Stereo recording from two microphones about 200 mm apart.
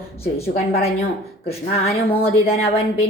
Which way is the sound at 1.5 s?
30° left (ahead or behind).